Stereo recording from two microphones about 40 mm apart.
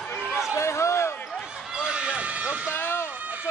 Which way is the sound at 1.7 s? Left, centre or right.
Right.